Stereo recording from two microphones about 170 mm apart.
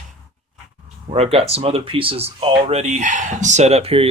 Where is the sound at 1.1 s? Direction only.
35° right (ahead or behind).